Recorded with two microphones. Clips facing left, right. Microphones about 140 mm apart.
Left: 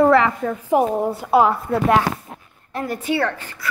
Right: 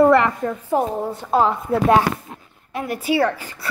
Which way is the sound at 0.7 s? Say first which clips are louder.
Left 4 dB; 10° left (ahead or behind).